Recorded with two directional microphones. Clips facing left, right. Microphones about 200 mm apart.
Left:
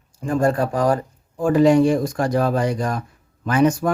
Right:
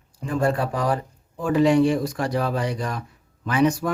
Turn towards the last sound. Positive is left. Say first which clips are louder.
# left 3 dB
turn(degrees=45)  # may be behind; listen again after turning